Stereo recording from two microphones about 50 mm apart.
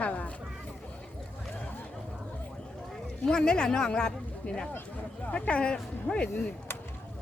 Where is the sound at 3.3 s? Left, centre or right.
Centre.